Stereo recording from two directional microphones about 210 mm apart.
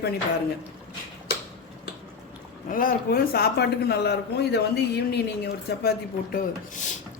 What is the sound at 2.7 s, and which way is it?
A man's voice, 40° left (ahead or behind).